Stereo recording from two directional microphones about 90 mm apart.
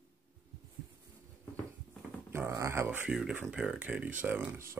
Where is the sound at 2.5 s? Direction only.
30° right (ahead or behind).